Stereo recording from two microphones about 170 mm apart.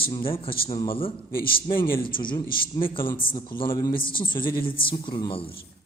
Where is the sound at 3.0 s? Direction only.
55° left (ahead or behind).